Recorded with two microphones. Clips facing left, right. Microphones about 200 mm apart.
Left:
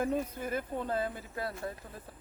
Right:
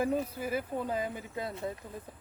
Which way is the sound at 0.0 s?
10° right (ahead or behind).